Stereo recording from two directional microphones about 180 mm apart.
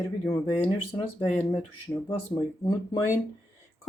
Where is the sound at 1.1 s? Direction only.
35° left (ahead or behind).